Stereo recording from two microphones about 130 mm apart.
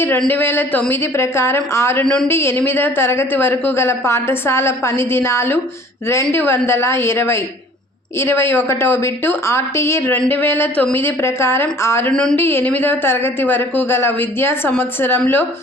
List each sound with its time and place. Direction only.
0.3 s a woman's voice: 15° left (ahead or behind)
12.1 s speech: 5° left (ahead or behind)
12.4 s a woman's voice: 15° left (ahead or behind)